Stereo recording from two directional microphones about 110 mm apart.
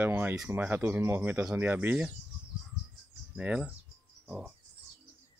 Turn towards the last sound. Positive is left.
turn(degrees=-10)  # may be behind; listen again after turning